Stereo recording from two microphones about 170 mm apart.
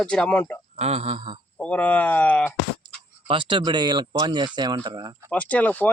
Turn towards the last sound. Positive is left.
turn(degrees=10)  # may be behind; listen again after turning